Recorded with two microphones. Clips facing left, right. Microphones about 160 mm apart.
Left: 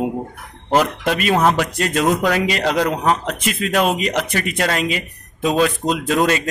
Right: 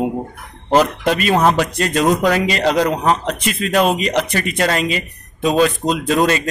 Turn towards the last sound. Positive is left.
turn(degrees=5)  # may be behind; listen again after turning